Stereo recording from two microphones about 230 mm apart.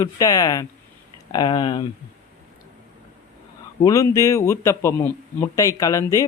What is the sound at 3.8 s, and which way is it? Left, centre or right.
A man's voice, centre.